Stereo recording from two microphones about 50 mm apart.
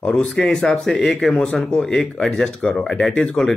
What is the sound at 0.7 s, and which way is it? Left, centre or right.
Speech, centre.